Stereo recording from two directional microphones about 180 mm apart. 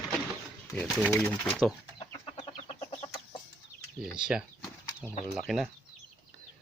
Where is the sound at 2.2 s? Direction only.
30° left (ahead or behind).